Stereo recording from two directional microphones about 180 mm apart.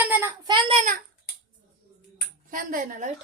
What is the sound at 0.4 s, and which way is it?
Child singing, 30° right (ahead or behind).